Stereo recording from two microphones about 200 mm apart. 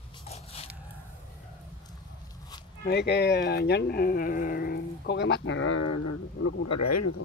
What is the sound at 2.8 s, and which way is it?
Speech, 55° left (ahead or behind).